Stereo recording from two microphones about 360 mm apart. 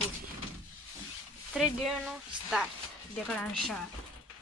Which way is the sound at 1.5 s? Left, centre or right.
Centre.